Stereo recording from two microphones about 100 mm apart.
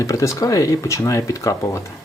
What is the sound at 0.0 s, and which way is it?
Speech, 35° left (ahead or behind).